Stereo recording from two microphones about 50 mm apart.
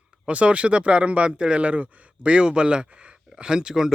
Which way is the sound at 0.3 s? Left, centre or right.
Right.